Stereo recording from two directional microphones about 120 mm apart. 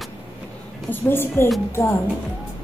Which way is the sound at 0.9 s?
20° left (ahead or behind).